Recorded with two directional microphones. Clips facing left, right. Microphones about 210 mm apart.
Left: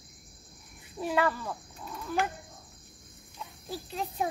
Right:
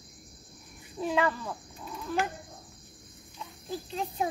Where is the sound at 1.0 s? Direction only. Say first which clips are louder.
Even; 5° left (ahead or behind).